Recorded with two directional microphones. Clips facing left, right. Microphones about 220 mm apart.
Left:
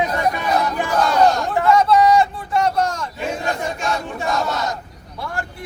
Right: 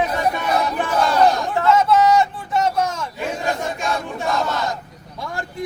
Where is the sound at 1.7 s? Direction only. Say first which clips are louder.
Left 1 dB; centre (ahead or behind).